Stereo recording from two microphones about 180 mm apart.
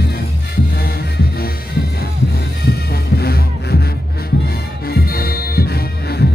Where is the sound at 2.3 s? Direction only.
60° left (ahead or behind).